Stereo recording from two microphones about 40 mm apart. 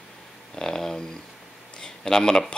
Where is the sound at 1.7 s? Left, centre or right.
Centre.